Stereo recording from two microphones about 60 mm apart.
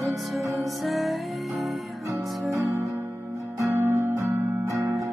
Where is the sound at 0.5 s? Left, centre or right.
Centre.